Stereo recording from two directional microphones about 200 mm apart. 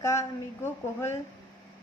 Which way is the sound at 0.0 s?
15° left (ahead or behind).